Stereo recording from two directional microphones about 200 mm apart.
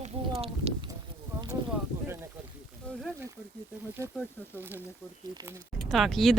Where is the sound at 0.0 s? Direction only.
30° right (ahead or behind).